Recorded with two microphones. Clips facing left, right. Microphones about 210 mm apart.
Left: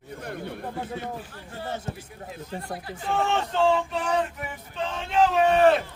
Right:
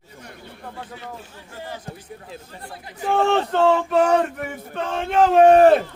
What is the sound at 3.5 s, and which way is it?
Speech, 60° right (ahead or behind).